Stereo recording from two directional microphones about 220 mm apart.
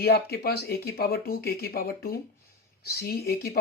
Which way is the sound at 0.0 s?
45° left (ahead or behind).